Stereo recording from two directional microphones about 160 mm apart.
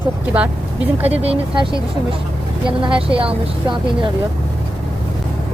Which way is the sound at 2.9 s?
35° right (ahead or behind).